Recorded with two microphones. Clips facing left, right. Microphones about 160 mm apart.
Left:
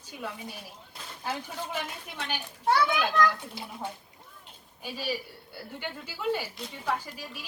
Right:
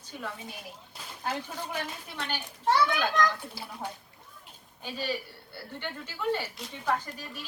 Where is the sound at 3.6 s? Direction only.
20° left (ahead or behind).